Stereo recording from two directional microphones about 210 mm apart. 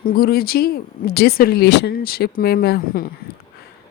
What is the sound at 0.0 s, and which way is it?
Speech, 45° left (ahead or behind).